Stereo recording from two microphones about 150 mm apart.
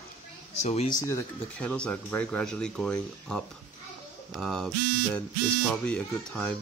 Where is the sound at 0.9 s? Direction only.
20° left (ahead or behind).